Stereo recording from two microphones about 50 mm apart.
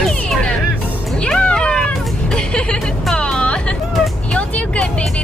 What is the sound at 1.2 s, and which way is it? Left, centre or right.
Cat, left.